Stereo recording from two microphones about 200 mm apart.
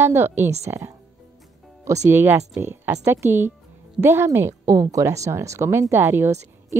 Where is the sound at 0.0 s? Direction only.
10° right (ahead or behind).